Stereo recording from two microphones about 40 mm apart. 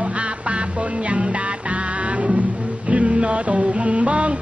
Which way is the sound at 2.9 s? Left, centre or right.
Right.